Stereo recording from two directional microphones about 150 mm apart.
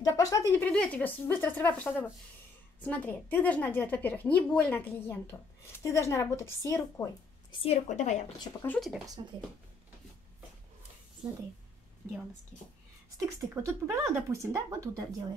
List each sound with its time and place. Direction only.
0.0 s a sound: 20° left (ahead or behind)
0.7 s a woman's voice: 10° left (ahead or behind)
7.6 s a woman's voice: 50° left (ahead or behind)
8.6 s speech: centre (ahead or behind)
13.2 s speech: 20° right (ahead or behind)